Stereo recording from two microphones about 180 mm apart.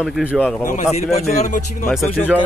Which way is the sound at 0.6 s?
40° left (ahead or behind).